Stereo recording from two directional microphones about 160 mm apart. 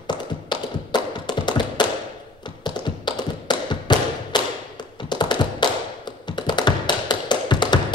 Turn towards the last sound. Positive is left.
turn(degrees=30)  # may be behind; listen again after turning